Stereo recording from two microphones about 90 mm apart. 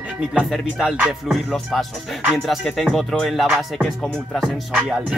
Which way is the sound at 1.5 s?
5° left (ahead or behind).